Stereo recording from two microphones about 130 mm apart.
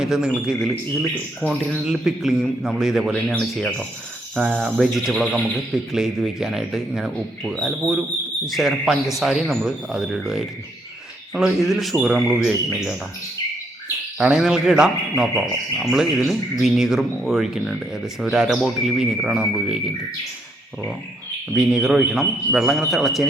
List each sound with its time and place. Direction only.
0.0 s speech: 5° right (ahead or behind)
14.2 s speech: 5° right (ahead or behind)
21.5 s speech: 5° right (ahead or behind)